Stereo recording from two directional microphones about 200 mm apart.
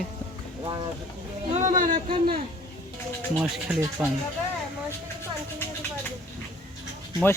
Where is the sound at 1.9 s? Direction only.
25° right (ahead or behind).